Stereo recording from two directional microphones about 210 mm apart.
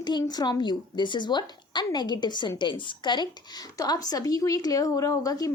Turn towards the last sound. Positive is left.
turn(degrees=15)  # may be behind; listen again after turning